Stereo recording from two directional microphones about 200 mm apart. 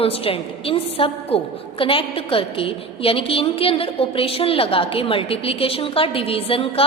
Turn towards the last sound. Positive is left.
turn(degrees=30)  # may be behind; listen again after turning